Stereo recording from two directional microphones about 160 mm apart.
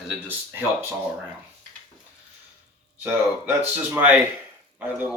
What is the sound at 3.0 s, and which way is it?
Speech, 10° right (ahead or behind).